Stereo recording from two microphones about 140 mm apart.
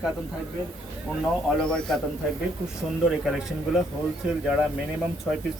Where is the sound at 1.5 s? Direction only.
5° left (ahead or behind).